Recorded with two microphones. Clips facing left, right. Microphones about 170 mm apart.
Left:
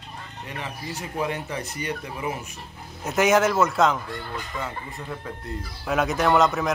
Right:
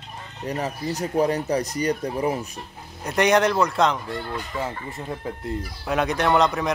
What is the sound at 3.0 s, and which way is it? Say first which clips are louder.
A man's voice: right 1 dB; centre (ahead or behind).